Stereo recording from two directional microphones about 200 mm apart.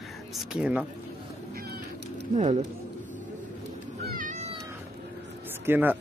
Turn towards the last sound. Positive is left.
turn(degrees=-10)  # may be behind; listen again after turning